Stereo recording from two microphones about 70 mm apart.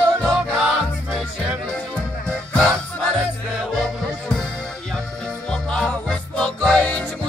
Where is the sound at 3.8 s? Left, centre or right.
Centre.